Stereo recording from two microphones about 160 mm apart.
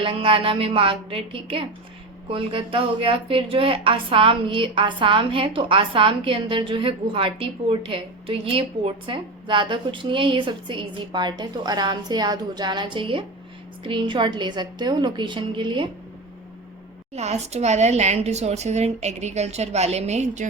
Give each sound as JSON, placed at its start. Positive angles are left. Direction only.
{"t": 0.0, "sound": "a woman's voice", "side_deg": -35}
{"t": 17.2, "sound": "speech", "side_deg": -45}